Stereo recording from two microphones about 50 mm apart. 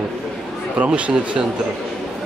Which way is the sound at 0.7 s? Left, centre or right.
Right.